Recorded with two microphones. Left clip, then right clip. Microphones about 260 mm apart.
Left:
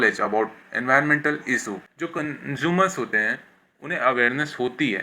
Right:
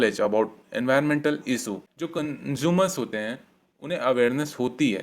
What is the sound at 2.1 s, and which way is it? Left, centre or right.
Speech, right.